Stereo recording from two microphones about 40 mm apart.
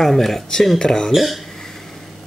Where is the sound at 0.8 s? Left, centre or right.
Left.